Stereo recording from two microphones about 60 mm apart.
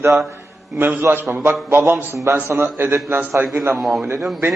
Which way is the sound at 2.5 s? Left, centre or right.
Right.